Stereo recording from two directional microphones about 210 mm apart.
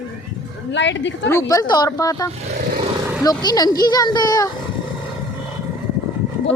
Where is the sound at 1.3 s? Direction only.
15° left (ahead or behind).